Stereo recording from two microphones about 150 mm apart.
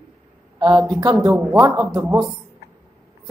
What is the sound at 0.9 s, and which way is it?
Speech, 25° right (ahead or behind).